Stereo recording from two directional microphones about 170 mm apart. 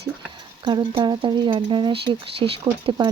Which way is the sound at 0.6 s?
30° right (ahead or behind).